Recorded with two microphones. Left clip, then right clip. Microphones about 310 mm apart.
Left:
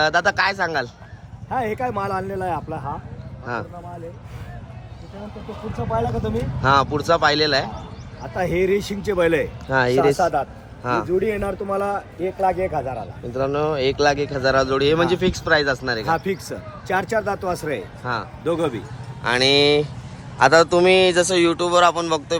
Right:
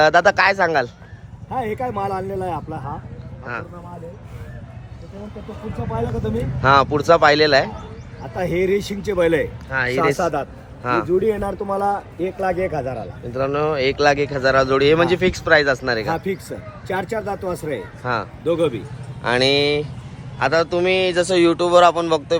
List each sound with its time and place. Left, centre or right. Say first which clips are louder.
0.0 s speech: right 4 dB; centre
3.4 s speech: left 1 dB; centre
5.5 s speech: left 3 dB; centre
9.6 s speech: left 3 dB; centre
10.2 s a man's voice: left 1 dB; right
10.8 s speech: right 2 dB; centre
11.2 s a man's voice: right 2 dB; centre
13.3 s speech: right 1 dB; centre